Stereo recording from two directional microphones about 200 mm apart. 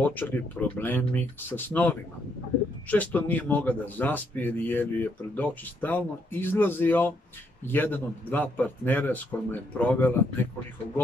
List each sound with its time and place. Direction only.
0.0 s speech: 10° left (ahead or behind)